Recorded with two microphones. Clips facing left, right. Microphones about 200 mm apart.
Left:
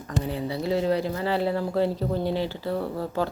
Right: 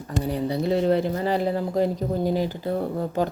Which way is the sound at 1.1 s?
45° right (ahead or behind).